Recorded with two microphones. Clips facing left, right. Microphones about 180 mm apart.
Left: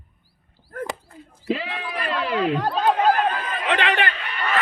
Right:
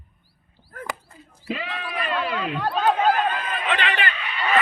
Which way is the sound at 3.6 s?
65° left (ahead or behind).